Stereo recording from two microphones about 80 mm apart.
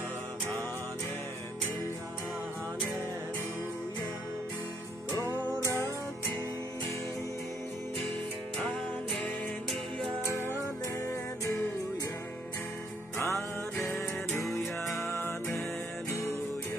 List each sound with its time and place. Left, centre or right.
5.2 s music: right
13.2 s music: left